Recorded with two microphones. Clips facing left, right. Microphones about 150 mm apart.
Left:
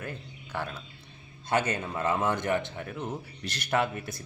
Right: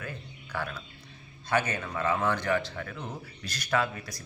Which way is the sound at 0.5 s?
20° left (ahead or behind).